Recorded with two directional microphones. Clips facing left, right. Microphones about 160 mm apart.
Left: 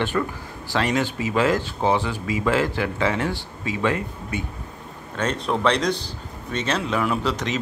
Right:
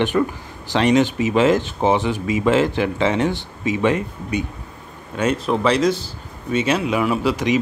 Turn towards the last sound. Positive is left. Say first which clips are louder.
# right 5 dB
turn(degrees=-10)  # may be behind; listen again after turning